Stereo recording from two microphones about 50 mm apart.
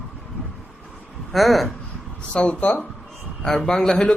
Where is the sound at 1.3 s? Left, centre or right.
Centre.